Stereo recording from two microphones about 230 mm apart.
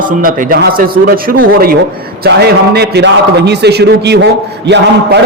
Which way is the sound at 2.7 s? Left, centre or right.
Right.